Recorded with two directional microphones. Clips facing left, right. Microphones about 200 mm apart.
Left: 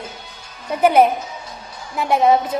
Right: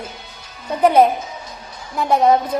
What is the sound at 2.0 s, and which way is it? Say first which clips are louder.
Music: right 1 dB; centre (ahead or behind).